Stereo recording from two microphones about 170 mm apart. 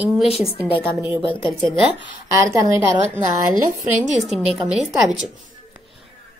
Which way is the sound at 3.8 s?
Centre (ahead or behind).